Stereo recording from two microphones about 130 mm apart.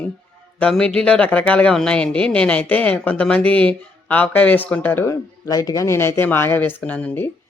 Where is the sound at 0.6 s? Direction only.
5° left (ahead or behind).